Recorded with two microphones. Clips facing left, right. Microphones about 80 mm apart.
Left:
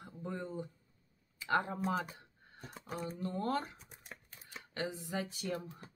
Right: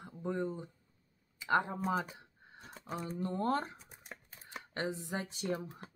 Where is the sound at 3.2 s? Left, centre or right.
Right.